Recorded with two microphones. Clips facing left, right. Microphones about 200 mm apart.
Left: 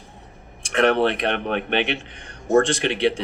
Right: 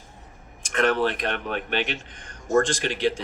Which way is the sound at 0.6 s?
65° left (ahead or behind).